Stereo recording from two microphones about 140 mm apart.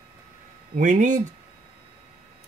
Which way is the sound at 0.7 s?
60° right (ahead or behind).